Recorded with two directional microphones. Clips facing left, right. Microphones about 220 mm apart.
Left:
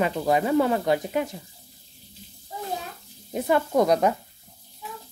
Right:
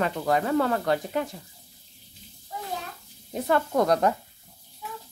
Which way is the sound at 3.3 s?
10° left (ahead or behind).